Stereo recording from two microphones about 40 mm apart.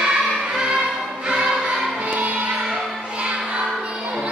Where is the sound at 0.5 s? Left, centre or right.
Centre.